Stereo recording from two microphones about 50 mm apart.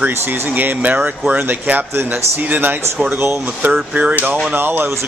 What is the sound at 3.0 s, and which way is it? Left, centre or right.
Speech, right.